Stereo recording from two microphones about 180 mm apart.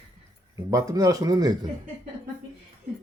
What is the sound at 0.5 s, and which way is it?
Speech, 20° right (ahead or behind).